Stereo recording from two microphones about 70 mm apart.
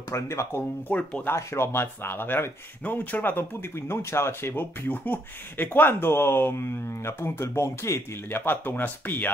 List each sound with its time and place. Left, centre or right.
0.1 s speech: left
7.4 s speech: left
8.3 s speech: left